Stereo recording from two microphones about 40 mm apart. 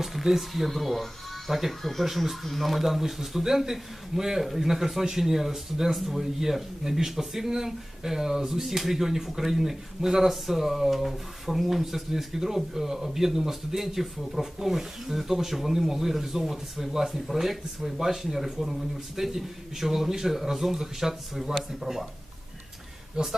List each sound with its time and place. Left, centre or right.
0.0 s a man's voice: centre
23.2 s a man's voice: centre